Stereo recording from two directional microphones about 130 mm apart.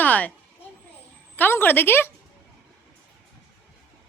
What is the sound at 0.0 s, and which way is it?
Vehicle, 10° left (ahead or behind).